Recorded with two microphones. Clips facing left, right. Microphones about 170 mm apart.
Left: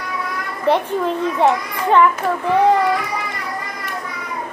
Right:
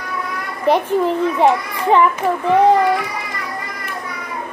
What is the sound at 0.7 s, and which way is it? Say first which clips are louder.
A child's voice: right 2 dB; 15° right (ahead or behind).